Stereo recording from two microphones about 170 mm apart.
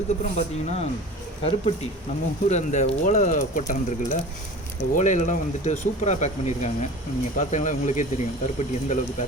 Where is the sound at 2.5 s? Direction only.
45° left (ahead or behind).